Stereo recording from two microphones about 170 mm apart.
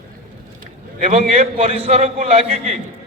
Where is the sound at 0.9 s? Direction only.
45° right (ahead or behind).